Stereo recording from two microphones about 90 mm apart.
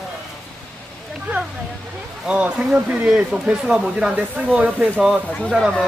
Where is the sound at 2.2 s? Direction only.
10° right (ahead or behind).